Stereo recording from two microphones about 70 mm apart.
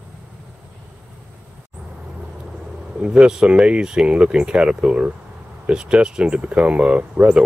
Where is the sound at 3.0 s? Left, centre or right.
Centre.